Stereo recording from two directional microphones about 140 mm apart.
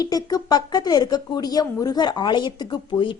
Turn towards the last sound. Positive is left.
turn(degrees=35)  # may be behind; listen again after turning